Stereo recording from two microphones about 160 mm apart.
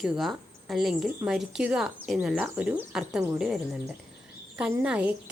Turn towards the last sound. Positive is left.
turn(degrees=-10)  # may be behind; listen again after turning